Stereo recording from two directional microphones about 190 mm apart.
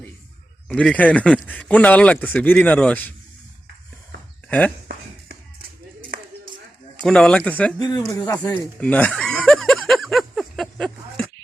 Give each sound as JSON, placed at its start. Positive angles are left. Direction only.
{"t": 0.7, "sound": "speech", "side_deg": 5}
{"t": 4.4, "sound": "speech", "side_deg": 5}
{"t": 6.0, "sound": "a sound", "side_deg": -45}
{"t": 6.9, "sound": "speech", "side_deg": 5}
{"t": 7.8, "sound": "speech", "side_deg": 20}
{"t": 8.8, "sound": "a sound", "side_deg": 5}